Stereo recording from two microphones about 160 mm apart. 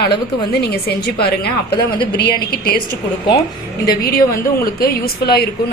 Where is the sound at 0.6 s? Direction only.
90° left.